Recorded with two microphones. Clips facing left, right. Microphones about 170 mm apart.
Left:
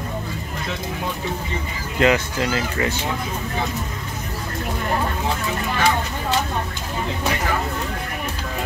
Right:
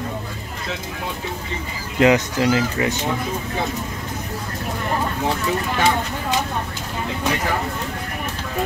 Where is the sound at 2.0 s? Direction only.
15° right (ahead or behind).